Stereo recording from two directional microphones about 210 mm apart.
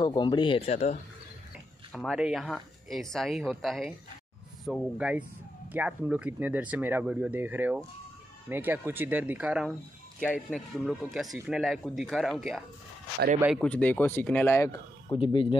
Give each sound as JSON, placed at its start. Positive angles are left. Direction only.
{"t": 0.0, "sound": "speech", "side_deg": 20}
{"t": 1.9, "sound": "speech", "side_deg": 0}